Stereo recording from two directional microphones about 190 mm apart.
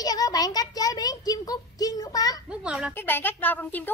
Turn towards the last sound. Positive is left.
turn(degrees=10)  # may be behind; listen again after turning